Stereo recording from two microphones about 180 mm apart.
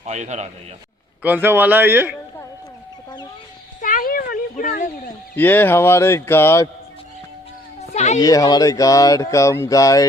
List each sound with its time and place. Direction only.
0.0 s a man's voice: 40° right (ahead or behind)
1.2 s speech: 10° right (ahead or behind)
3.8 s children playing: 50° left (ahead or behind)
5.4 s speech: 10° left (ahead or behind)
7.8 s a sound: 40° left (ahead or behind)
8.2 s a sound: 20° left (ahead or behind)